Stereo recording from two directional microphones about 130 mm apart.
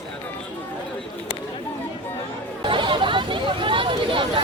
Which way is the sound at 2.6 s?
40° right (ahead or behind).